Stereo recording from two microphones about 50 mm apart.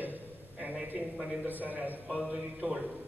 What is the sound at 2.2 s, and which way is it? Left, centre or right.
Speech, centre.